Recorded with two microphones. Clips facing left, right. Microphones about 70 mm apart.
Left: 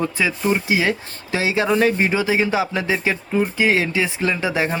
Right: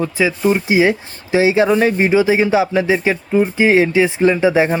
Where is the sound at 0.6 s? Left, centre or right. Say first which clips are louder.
Right 6 dB; right.